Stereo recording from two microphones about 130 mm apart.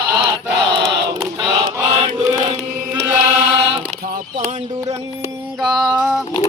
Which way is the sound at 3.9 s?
90° right.